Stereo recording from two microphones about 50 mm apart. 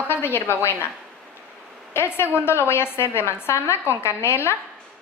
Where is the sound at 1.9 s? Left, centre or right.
Left.